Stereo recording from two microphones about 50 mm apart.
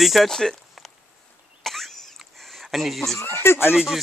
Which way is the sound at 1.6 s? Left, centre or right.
Centre.